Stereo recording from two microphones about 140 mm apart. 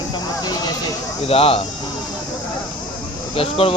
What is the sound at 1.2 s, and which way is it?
Speech, 45° left (ahead or behind).